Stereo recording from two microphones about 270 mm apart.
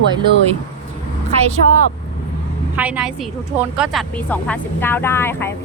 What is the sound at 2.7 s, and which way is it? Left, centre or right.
A woman's voice, centre.